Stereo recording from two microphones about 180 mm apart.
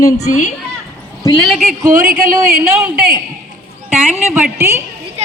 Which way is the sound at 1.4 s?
Centre (ahead or behind).